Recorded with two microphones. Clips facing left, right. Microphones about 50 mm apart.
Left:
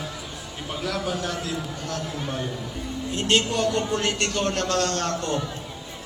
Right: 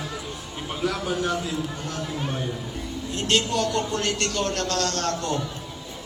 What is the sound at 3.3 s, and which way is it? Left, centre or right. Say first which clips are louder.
A man's voice: left 1 dB; left.